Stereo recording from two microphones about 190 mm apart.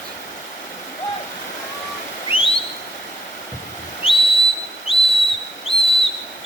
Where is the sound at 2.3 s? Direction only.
30° left (ahead or behind).